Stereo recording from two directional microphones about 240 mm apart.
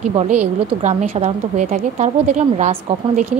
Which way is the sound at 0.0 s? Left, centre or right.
Right.